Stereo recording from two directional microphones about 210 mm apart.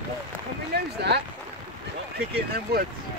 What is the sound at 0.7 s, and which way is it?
Speech, 50° right (ahead or behind).